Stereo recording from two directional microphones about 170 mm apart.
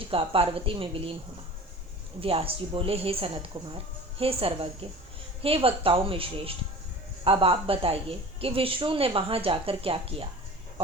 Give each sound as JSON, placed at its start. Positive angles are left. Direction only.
{"t": 0.1, "sound": "speech", "side_deg": -30}
{"t": 2.2, "sound": "speech", "side_deg": -35}